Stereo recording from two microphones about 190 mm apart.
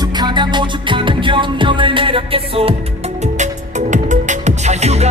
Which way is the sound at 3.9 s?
40° right (ahead or behind).